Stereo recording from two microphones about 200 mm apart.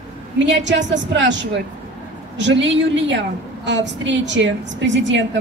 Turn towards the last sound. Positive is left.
turn(degrees=-65)  # may be behind; listen again after turning